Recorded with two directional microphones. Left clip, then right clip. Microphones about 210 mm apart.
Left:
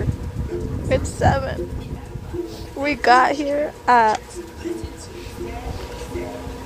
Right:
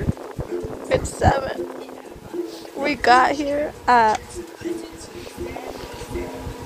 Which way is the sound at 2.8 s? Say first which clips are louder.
Left 1 dB; centre (ahead or behind).